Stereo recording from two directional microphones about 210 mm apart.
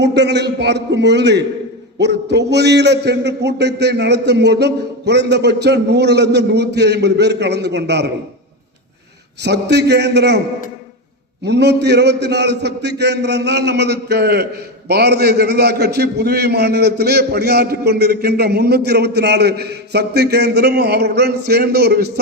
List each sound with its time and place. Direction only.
0.0 s a man's voice: 55° right (ahead or behind)
9.4 s a man's voice: 55° right (ahead or behind)
11.4 s a man's voice: 55° right (ahead or behind)